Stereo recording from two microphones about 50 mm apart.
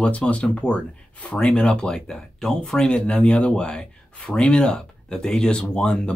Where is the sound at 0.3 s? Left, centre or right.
Left.